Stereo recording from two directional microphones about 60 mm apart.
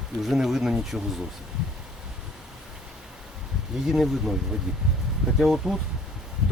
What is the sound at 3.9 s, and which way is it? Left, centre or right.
Speech, centre.